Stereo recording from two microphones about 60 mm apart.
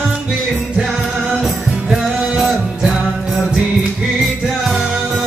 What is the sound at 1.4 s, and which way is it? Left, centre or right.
Music, centre.